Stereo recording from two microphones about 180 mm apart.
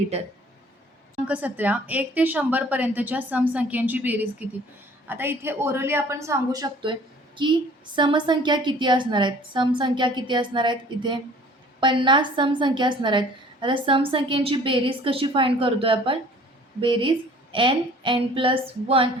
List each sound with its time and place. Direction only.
1.3 s a woman's voice: 10° right (ahead or behind); by 19.1 s 30° right (ahead or behind)